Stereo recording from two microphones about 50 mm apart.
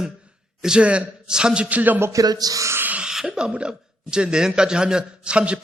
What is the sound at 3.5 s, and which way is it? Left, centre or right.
A man's voice, centre.